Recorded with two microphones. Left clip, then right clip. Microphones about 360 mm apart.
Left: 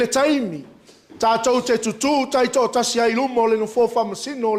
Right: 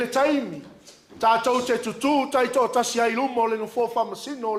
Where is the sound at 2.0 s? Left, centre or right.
Left.